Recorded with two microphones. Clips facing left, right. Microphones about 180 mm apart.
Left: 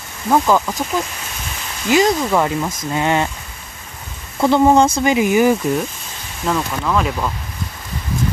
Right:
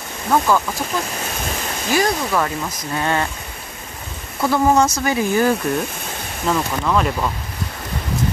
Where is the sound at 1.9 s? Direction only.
20° left (ahead or behind).